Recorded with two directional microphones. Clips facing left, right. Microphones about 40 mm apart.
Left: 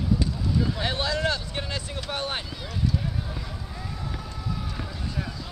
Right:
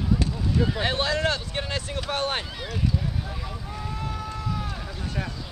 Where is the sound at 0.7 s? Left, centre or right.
Right.